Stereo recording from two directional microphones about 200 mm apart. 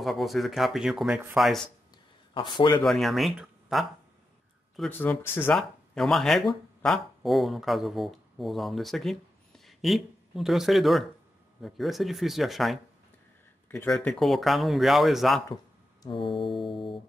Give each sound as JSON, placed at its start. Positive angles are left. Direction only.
{"t": 0.0, "sound": "speech", "side_deg": 0}
{"t": 2.3, "sound": "music", "side_deg": 25}
{"t": 2.8, "sound": "speech", "side_deg": 0}
{"t": 5.6, "sound": "speech", "side_deg": 0}
{"t": 15.4, "sound": "speech", "side_deg": 20}
{"t": 16.6, "sound": "music", "side_deg": 25}